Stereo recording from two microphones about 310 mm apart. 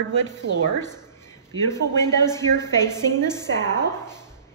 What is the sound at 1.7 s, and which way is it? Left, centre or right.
A woman's voice, centre.